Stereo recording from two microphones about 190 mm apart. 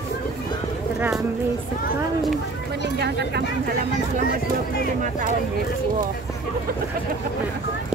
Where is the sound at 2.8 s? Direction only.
60° right (ahead or behind).